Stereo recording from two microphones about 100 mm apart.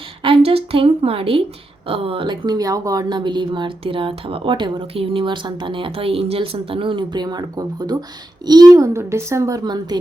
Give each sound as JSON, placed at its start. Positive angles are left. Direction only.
{"t": 0.2, "sound": "a woman's voice", "side_deg": -65}
{"t": 9.6, "sound": "a woman's voice", "side_deg": -45}